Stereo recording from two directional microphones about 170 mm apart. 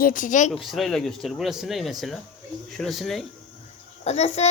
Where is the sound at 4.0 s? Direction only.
40° left (ahead or behind).